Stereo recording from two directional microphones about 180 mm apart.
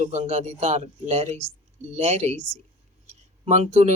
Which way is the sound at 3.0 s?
40° right (ahead or behind).